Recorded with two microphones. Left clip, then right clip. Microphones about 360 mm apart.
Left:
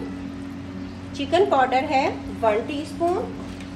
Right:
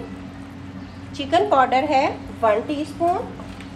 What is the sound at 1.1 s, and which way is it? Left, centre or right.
A woman's voice, right.